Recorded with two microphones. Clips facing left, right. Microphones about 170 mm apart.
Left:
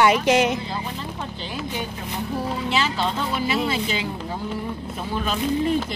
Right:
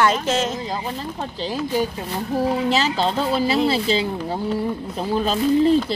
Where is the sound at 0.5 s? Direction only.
40° right (ahead or behind).